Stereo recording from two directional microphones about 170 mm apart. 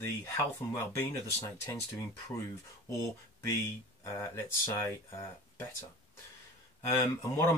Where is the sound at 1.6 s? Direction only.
15° left (ahead or behind).